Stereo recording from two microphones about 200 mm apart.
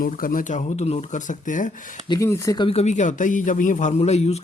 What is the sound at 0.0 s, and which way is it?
A man's voice, 45° left (ahead or behind).